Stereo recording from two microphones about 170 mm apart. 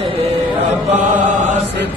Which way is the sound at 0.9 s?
45° right (ahead or behind).